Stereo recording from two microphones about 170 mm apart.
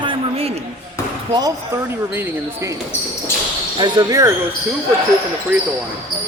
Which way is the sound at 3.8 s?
25° right (ahead or behind).